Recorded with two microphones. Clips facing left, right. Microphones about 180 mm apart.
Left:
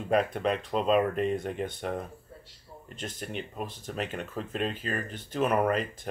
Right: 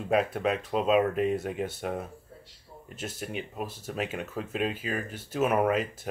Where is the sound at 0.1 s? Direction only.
5° right (ahead or behind).